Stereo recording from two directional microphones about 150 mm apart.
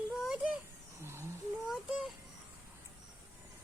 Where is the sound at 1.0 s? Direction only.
15° right (ahead or behind).